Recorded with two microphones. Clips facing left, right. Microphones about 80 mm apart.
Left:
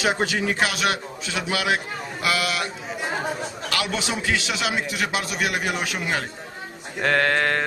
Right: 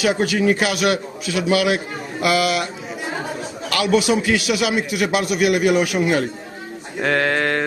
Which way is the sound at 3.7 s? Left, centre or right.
Right.